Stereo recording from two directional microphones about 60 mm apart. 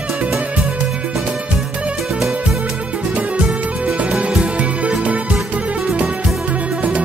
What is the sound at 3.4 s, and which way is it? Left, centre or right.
Music, centre.